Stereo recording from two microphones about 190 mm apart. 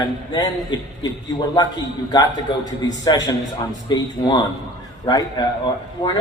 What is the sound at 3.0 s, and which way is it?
A man's voice, 20° left (ahead or behind).